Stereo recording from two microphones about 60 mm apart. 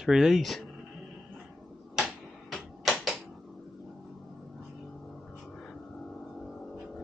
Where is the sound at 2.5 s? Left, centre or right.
Centre.